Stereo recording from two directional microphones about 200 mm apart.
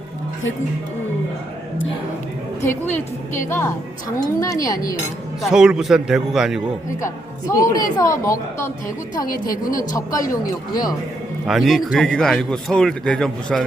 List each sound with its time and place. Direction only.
2.6 s a woman's voice: 10° left (ahead or behind)
5.4 s speech: 5° right (ahead or behind)
7.0 s a woman's voice: 15° left (ahead or behind)
9.7 s a woman's voice: 15° left (ahead or behind)
11.4 s speech: centre (ahead or behind)